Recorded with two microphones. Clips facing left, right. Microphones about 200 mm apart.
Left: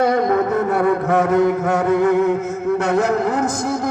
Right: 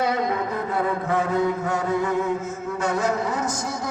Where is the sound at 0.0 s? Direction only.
50° left (ahead or behind).